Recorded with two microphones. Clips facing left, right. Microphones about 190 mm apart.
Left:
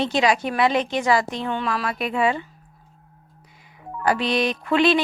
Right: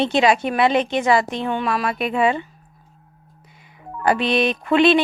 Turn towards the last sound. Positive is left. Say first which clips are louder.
# right 3 dB
turn(degrees=-20)  # may be behind; listen again after turning